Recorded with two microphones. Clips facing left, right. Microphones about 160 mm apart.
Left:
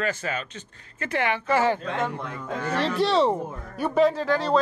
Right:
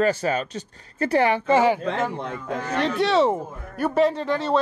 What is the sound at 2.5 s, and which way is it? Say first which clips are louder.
Speech: right 1 dB; centre (ahead or behind).